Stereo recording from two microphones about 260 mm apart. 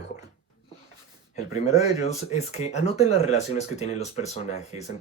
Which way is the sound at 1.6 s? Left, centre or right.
Left.